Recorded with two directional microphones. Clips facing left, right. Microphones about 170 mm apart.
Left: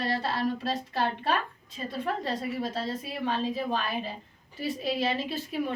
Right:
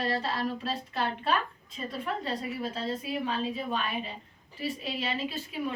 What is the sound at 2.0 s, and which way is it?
A woman's voice, 35° left (ahead or behind).